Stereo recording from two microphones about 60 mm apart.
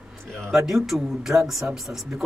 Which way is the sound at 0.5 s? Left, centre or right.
Centre.